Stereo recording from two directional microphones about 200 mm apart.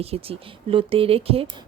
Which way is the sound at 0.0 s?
30° right (ahead or behind).